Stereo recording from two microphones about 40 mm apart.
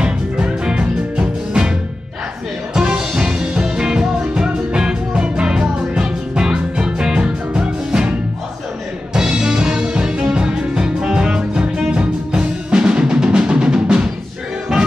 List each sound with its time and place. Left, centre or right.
0.0 s music: right
2.7 s music: right
11.9 s drum: right